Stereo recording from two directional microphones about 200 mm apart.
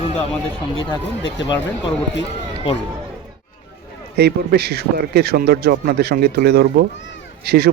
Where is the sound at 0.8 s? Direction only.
25° left (ahead or behind).